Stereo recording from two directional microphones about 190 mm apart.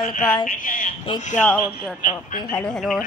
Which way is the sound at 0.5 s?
45° left (ahead or behind).